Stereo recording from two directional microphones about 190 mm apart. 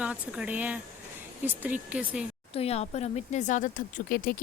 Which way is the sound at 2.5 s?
35° left (ahead or behind).